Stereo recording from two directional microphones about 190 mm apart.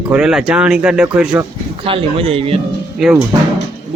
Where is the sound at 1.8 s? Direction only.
30° right (ahead or behind).